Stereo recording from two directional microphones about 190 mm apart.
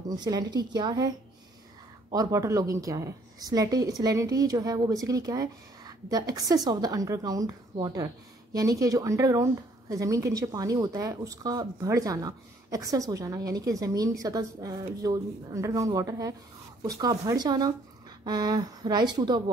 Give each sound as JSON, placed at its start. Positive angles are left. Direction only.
{"t": 0.1, "sound": "a woman's voice", "side_deg": -20}